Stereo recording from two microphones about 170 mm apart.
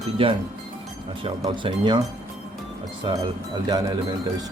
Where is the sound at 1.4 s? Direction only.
30° right (ahead or behind).